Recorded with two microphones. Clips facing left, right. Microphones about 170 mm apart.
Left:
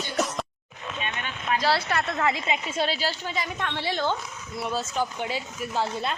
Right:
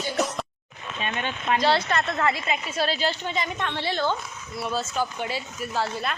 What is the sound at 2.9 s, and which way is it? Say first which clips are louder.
A woman's voice: right 3 dB; 5° left (ahead or behind).